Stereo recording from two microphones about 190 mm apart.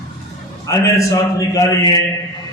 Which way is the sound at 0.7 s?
15° left (ahead or behind).